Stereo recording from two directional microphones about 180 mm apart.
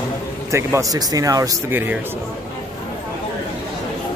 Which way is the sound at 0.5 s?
15° right (ahead or behind).